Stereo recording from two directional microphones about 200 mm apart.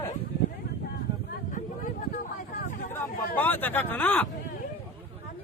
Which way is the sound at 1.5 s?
40° left (ahead or behind).